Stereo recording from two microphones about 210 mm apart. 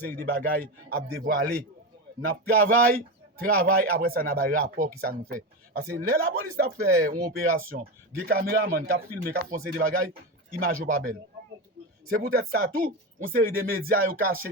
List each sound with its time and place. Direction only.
0.1 s speech: 45° right (ahead or behind)
12.2 s speech: 45° right (ahead or behind)